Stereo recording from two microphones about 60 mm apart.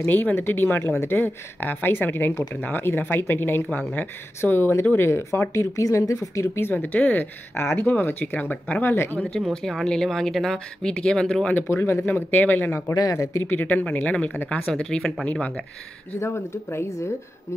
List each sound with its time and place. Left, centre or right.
0.1 s speech: left
6.4 s speech: left
7.5 s speech: left
7.8 s speech: left
8.8 s speech: left
9.5 s speech: centre
11.5 s speech: left
12.1 s speech: left
12.9 s speech: left
13.4 s speech: left
14.7 s speech: centre
16.2 s speech: left